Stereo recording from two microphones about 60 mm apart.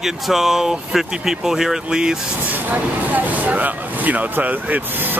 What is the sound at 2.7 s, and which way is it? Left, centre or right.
Speech, right.